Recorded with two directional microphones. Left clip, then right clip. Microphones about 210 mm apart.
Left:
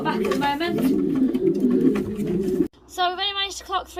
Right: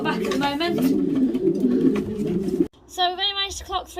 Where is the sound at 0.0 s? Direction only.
50° right (ahead or behind).